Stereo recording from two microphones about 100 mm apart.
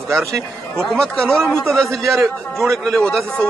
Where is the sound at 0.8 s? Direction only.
5° left (ahead or behind).